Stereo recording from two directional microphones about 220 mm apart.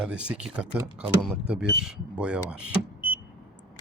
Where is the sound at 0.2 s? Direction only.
5° right (ahead or behind).